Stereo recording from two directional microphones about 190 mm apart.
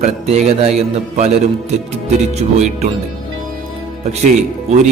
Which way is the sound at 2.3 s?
35° right (ahead or behind).